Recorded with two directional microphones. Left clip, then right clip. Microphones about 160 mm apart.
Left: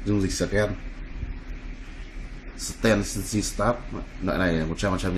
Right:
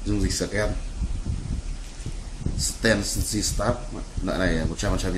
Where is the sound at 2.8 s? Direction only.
55° left (ahead or behind).